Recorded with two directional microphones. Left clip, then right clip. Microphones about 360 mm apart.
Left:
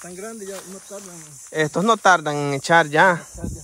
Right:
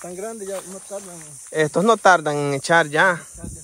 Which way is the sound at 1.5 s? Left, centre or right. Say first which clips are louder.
Right 2 dB; centre.